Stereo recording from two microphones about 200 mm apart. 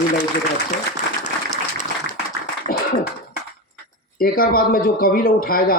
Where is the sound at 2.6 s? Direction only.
45° left (ahead or behind).